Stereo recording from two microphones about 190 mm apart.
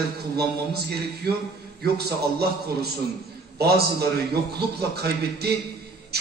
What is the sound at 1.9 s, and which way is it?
A man's voice, 55° right (ahead or behind).